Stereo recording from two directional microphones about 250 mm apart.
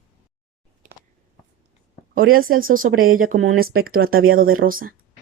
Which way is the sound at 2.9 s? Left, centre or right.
Right.